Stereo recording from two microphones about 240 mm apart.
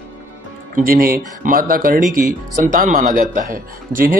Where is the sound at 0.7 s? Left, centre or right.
Right.